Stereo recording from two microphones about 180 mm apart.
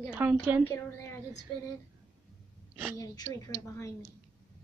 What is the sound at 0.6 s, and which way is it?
Speech, 15° left (ahead or behind).